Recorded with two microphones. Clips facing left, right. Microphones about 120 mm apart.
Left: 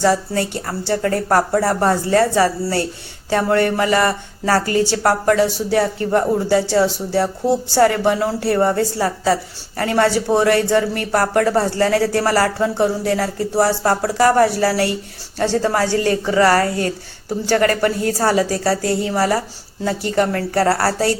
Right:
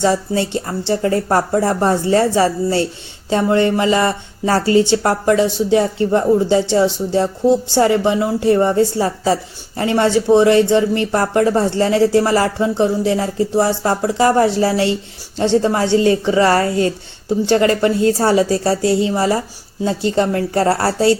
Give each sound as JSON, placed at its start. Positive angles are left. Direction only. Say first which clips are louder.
{"t": 0.0, "sound": "speech", "louder": "right 1 dB", "side_deg": -20}